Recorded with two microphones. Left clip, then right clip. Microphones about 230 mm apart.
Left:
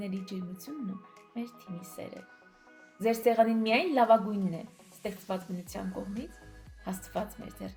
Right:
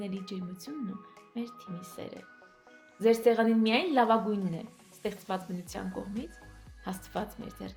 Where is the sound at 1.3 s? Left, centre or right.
Right.